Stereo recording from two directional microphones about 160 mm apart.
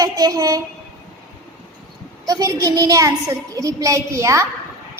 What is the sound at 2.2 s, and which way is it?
A woman's voice, 20° right (ahead or behind).